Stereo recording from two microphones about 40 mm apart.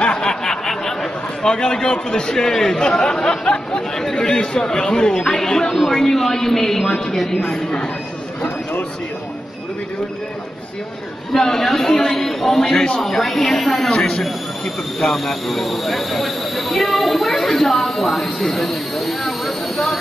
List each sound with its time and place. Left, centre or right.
0.0 s a sound: left
1.4 s a man's voice: centre
11.3 s a man's voice: centre
13.8 s speech: left
15.1 s speech: centre